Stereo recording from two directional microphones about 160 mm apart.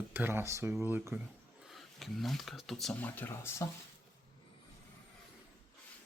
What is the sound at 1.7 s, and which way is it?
Speech, centre (ahead or behind).